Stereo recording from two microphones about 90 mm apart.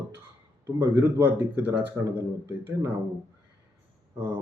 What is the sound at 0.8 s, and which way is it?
Speech, 25° right (ahead or behind).